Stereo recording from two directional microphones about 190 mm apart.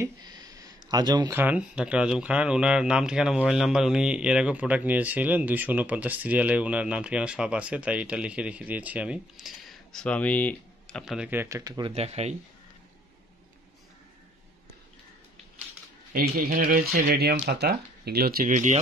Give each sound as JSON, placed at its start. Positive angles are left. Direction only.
{"t": 0.0, "sound": "a sound", "side_deg": -20}
{"t": 1.4, "sound": "speech", "side_deg": -5}
{"t": 11.9, "sound": "speech", "side_deg": -35}
{"t": 16.1, "sound": "speech", "side_deg": -50}